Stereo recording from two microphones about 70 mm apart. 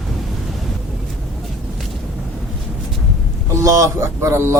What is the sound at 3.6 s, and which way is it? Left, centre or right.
Speech, right.